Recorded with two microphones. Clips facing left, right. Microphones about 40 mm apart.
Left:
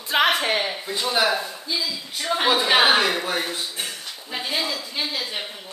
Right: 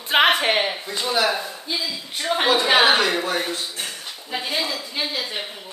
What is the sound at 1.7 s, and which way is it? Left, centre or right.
Speech, right.